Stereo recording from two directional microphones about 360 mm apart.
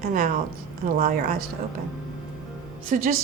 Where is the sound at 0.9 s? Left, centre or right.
Right.